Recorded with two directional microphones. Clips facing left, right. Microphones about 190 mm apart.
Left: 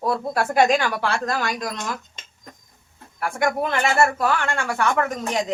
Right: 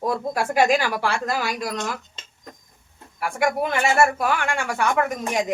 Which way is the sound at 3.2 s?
10° right (ahead or behind).